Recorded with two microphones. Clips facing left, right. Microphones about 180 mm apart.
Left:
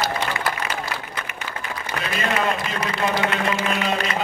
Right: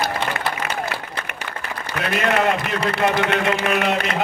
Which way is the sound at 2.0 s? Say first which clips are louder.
Right 5 dB; 65° right (ahead or behind).